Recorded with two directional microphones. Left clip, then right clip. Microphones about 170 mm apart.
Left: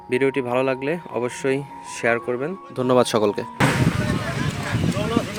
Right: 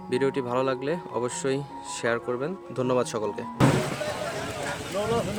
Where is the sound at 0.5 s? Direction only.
15° left (ahead or behind).